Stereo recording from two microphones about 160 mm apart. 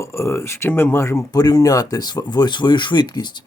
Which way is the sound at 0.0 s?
15° left (ahead or behind).